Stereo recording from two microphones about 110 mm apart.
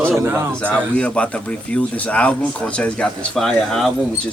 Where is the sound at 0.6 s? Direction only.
10° left (ahead or behind).